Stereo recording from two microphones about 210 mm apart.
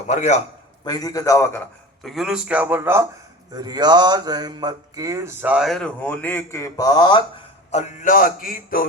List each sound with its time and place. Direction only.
0.1 s music: 35° left (ahead or behind)
0.9 s a man's voice: 20° left (ahead or behind)
2.0 s mantra: centre (ahead or behind); by 7.2 s 20° left (ahead or behind)
7.7 s music: 35° left (ahead or behind)